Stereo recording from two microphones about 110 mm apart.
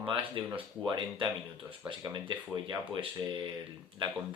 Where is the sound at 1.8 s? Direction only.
45° right (ahead or behind).